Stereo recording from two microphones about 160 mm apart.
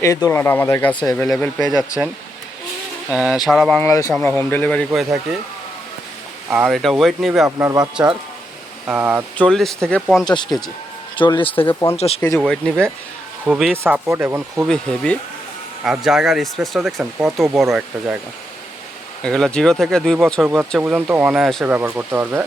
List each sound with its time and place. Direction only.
0.3 s speech: 15° left (ahead or behind)
3.1 s speech: 5° right (ahead or behind)
3.8 s speech: 20° left (ahead or behind)
4.9 s speech: 5° right (ahead or behind)
6.5 s speech: centre (ahead or behind)
7.4 s speech: 20° right (ahead or behind)
8.9 s speech: 10° right (ahead or behind)
9.4 s speech: 5° left (ahead or behind)
10.2 s speech: 25° left (ahead or behind)
11.7 s speech: 15° left (ahead or behind)
11.9 s speech: 40° left (ahead or behind)
12.4 s speech: 5° left (ahead or behind); by 14.7 s 15° right (ahead or behind)
14.7 s speech: 5° left (ahead or behind)
19.2 s speech: 5° left (ahead or behind); by 22.4 s 10° right (ahead or behind)